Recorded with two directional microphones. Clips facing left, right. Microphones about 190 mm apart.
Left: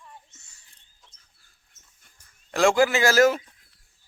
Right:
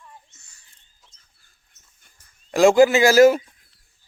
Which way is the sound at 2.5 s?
20° right (ahead or behind).